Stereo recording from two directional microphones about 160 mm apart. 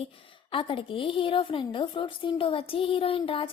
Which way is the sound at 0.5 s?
35° left (ahead or behind).